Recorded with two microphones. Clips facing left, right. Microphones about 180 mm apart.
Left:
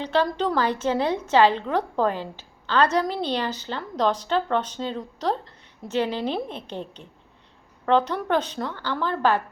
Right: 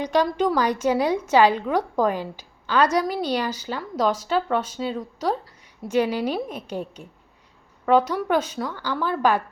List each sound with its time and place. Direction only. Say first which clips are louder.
0.0 s a woman's voice: right 2 dB; 15° right (ahead or behind)